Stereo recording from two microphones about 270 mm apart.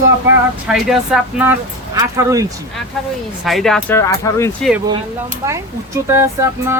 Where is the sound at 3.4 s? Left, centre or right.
Centre.